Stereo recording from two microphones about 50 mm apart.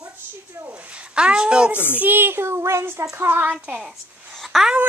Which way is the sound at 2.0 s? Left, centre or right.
Right.